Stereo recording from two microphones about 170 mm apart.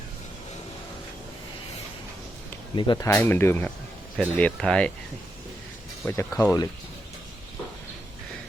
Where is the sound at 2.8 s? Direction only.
25° left (ahead or behind); by 4.9 s 5° left (ahead or behind).